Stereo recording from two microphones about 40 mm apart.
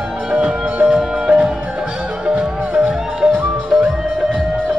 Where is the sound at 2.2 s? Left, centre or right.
Right.